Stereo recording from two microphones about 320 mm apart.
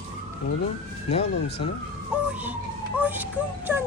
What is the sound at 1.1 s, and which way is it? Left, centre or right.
Speech, centre.